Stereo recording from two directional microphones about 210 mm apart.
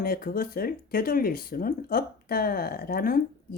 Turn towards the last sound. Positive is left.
turn(degrees=45)  # may be behind; listen again after turning